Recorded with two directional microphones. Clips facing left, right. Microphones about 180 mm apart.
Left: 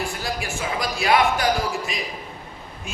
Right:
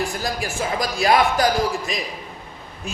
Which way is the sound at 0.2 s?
40° right (ahead or behind).